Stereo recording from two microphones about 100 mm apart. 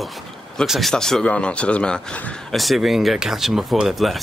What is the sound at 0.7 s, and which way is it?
Speech, centre (ahead or behind).